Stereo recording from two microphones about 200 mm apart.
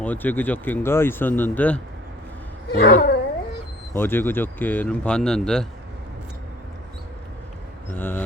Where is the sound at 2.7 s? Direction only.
55° left (ahead or behind).